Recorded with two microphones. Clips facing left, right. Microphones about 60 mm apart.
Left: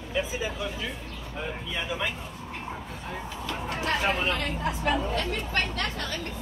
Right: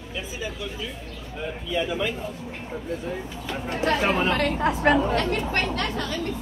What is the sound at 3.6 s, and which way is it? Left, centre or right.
Speech, right.